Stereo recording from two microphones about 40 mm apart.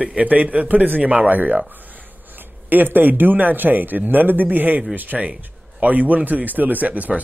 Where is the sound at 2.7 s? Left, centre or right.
Right.